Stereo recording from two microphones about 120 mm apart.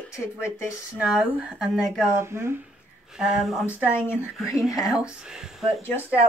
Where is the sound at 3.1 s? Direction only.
5° right (ahead or behind).